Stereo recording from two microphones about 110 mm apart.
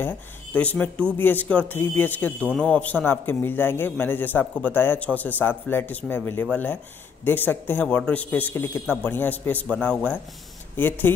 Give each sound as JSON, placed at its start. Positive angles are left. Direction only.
{"t": 0.0, "sound": "speech", "side_deg": 15}